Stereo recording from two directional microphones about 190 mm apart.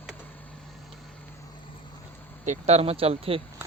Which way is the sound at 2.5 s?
35° right (ahead or behind).